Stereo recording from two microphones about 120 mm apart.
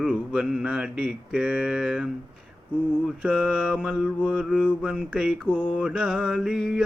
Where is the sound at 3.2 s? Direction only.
10° right (ahead or behind).